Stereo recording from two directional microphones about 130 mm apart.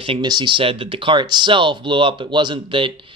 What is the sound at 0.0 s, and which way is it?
Speech, 40° right (ahead or behind).